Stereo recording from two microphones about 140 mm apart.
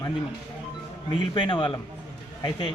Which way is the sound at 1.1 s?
35° left (ahead or behind).